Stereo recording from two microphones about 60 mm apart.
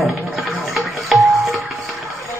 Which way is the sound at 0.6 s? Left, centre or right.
Centre.